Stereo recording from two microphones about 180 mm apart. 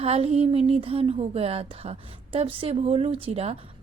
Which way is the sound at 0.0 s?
35° right (ahead or behind).